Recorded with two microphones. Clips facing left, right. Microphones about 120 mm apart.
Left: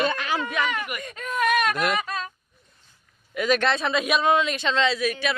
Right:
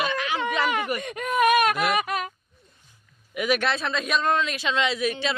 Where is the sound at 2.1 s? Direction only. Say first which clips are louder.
Right 3 dB; 15° right (ahead or behind).